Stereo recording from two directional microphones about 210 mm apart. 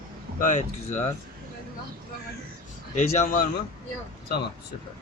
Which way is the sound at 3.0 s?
40° left (ahead or behind).